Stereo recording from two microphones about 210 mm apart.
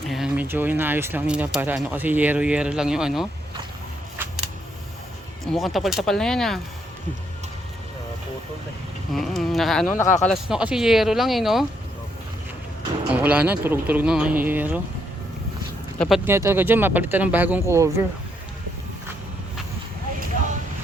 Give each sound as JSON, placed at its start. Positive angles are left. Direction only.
{"t": 0.1, "sound": "speech", "side_deg": -5}
{"t": 4.2, "sound": "a sound", "side_deg": -10}
{"t": 5.5, "sound": "speech", "side_deg": 0}
{"t": 9.1, "sound": "speech", "side_deg": 0}
{"t": 13.1, "sound": "speech", "side_deg": -5}
{"t": 16.0, "sound": "speech", "side_deg": 0}
{"t": 16.3, "sound": "speech", "side_deg": -10}